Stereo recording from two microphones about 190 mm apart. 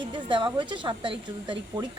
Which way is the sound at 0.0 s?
25° right (ahead or behind).